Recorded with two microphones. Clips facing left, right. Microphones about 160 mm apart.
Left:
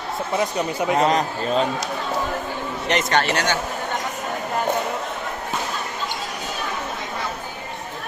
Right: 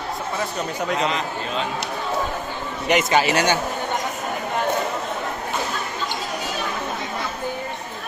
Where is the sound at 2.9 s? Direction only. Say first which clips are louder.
Right 2 dB; 5° right (ahead or behind).